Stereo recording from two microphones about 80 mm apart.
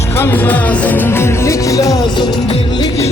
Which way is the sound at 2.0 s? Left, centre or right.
Left.